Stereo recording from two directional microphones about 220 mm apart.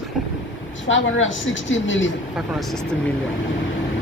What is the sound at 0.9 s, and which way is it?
Speech, 60° left (ahead or behind).